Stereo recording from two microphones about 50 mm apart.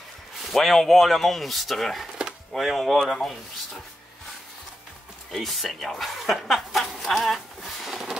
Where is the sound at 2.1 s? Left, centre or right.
Centre.